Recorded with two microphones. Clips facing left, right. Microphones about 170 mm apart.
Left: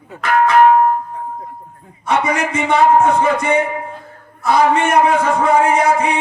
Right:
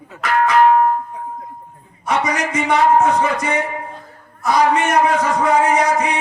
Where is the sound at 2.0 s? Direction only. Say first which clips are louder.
Left 2 dB; 30° left (ahead or behind).